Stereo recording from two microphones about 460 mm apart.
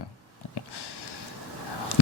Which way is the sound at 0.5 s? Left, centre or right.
Left.